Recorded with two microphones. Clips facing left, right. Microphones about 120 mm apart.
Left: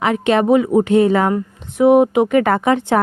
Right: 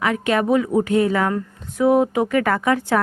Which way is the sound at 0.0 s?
25° left (ahead or behind).